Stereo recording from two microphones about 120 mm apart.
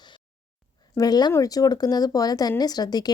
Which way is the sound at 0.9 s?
35° left (ahead or behind).